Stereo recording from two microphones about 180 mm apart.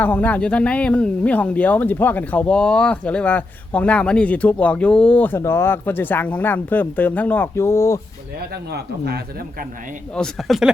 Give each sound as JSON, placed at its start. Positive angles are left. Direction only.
{"t": 0.0, "sound": "speech", "side_deg": 10}
{"t": 8.7, "sound": "speech", "side_deg": -65}
{"t": 10.2, "sound": "speech", "side_deg": 0}